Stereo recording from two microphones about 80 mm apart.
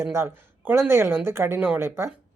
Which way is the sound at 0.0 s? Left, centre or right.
Right.